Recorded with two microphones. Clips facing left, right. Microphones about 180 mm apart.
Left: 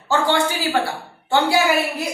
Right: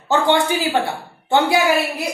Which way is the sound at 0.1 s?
20° right (ahead or behind).